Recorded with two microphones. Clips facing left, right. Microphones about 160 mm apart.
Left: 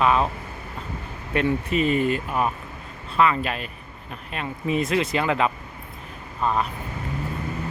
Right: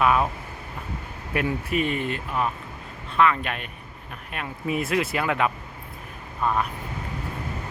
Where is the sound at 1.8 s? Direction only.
5° left (ahead or behind).